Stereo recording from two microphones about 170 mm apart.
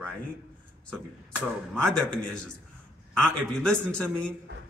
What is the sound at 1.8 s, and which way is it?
Speech, 5° left (ahead or behind).